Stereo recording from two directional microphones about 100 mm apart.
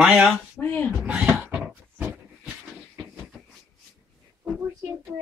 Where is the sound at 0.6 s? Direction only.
15° left (ahead or behind).